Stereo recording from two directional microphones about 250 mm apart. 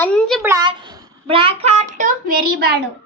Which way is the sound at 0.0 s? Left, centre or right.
Centre.